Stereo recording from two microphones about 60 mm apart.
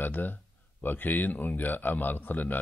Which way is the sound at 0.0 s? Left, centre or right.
Left.